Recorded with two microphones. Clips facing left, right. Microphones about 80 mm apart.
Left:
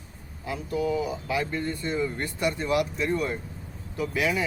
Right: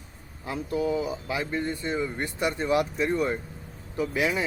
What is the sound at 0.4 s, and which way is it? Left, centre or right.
Speech, right.